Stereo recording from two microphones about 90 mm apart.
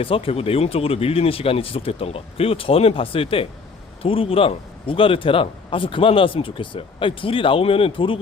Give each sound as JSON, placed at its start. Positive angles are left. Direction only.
{"t": 0.0, "sound": "a man's voice", "side_deg": 90}